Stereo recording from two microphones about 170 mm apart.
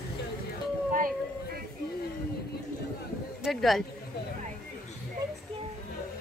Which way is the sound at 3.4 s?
Centre (ahead or behind).